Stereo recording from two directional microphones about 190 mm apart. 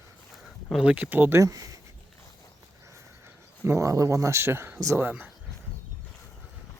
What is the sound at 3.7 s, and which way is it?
Speech, 15° right (ahead or behind).